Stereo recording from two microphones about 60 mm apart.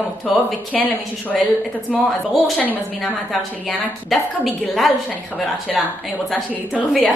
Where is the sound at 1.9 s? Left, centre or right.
Centre.